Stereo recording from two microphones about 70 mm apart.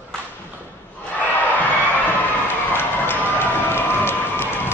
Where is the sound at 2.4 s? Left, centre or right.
Left.